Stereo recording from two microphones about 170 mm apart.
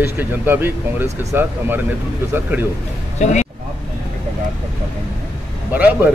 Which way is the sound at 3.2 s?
45° left (ahead or behind).